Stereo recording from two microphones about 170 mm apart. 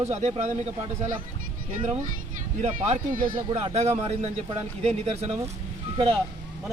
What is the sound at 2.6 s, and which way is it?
Speech, 50° right (ahead or behind).